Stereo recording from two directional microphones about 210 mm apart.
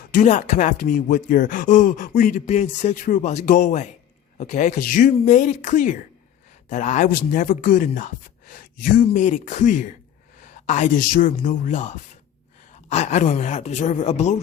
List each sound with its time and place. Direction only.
0.1 s speech: 35° left (ahead or behind)